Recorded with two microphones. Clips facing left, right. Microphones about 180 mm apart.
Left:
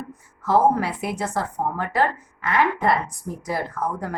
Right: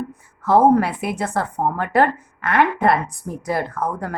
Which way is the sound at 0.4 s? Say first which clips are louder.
Right 5 dB; 60° right (ahead or behind).